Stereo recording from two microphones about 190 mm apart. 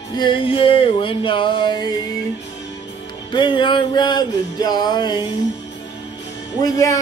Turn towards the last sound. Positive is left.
turn(degrees=15)  # may be behind; listen again after turning